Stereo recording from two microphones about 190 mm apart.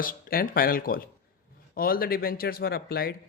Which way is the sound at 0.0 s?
50° left (ahead or behind).